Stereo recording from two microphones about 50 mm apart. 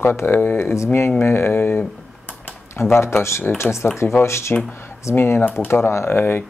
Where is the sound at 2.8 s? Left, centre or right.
Left.